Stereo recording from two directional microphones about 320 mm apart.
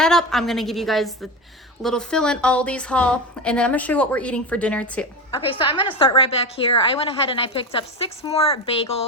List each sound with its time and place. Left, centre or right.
0.0 s speech: centre
5.5 s a woman's voice: centre